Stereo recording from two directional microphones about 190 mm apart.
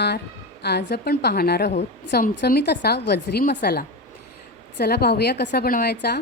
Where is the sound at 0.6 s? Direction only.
60° left (ahead or behind).